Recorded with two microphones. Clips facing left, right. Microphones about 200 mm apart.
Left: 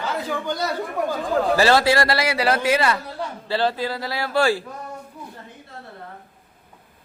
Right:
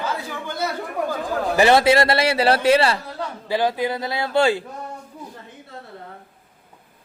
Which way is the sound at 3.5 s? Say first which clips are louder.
Right 2 dB; 15° right (ahead or behind).